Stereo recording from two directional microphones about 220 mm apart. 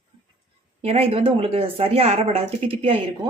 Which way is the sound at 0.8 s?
30° right (ahead or behind).